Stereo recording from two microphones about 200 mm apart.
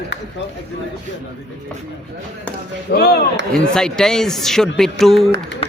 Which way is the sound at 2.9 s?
55° left (ahead or behind).